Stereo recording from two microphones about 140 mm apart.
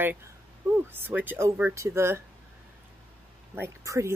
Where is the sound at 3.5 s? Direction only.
20° right (ahead or behind).